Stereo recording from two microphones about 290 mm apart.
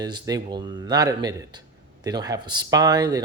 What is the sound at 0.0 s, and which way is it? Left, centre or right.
Speech, centre.